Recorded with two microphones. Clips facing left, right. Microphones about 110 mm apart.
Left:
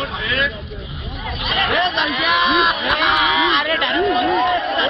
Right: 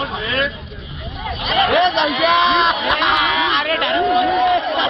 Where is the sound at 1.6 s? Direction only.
25° right (ahead or behind).